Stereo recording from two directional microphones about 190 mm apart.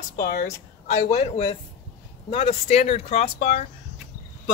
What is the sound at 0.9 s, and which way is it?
Speech, 35° left (ahead or behind).